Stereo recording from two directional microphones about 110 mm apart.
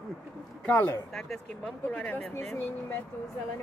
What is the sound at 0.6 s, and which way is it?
Speech, 15° left (ahead or behind).